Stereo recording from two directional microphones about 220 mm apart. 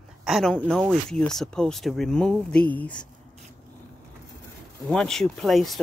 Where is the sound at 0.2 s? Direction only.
Centre (ahead or behind).